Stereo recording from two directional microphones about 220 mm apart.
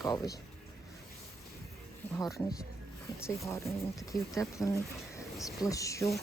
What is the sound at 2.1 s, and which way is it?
Speech, centre (ahead or behind).